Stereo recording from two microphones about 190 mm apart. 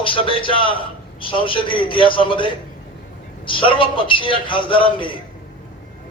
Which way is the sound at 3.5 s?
25° left (ahead or behind).